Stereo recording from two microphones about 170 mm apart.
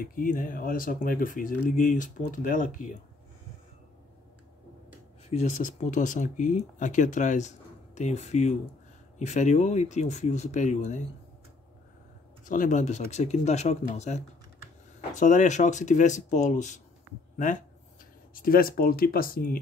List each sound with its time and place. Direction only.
0.0 s speech: 55° left (ahead or behind)
5.3 s speech: 45° left (ahead or behind)
12.4 s speech: 50° left (ahead or behind)
18.3 s speech: 55° left (ahead or behind)